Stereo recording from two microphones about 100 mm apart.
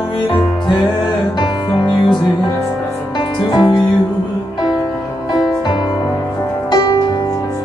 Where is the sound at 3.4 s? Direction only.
50° left (ahead or behind).